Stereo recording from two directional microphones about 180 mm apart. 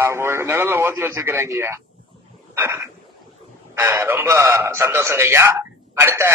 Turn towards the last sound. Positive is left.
turn(degrees=-15)  # may be behind; listen again after turning